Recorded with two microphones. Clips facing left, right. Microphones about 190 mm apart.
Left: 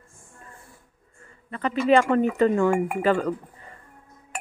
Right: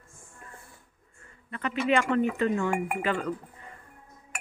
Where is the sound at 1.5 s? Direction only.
35° left (ahead or behind).